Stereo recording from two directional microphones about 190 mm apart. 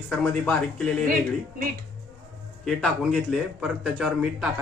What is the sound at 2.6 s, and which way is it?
Speech, centre (ahead or behind).